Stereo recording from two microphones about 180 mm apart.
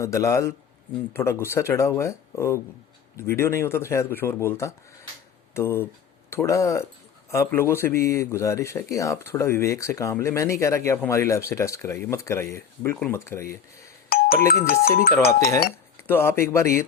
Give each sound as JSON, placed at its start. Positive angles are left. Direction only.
{"t": 0.0, "sound": "a man's voice", "side_deg": 15}
{"t": 14.1, "sound": "doorbell", "side_deg": 55}
{"t": 14.7, "sound": "speech", "side_deg": 55}
{"t": 15.3, "sound": "a man's voice", "side_deg": 15}